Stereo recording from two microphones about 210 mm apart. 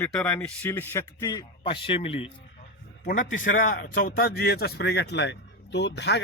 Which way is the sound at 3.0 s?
40° left (ahead or behind).